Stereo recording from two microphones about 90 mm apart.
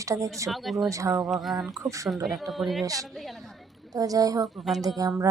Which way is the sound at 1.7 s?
35° right (ahead or behind).